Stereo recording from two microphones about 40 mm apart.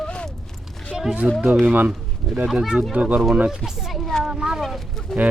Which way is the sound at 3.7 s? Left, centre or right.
Centre.